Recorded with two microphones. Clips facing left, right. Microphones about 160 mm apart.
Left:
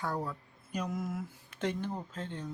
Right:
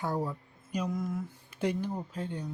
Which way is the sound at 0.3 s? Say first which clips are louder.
Right 3 dB; 10° right (ahead or behind).